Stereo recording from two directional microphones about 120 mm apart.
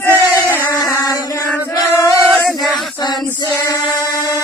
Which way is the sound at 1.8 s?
25° left (ahead or behind).